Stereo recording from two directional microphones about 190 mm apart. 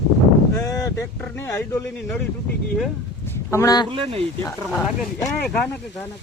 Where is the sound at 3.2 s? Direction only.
15° left (ahead or behind).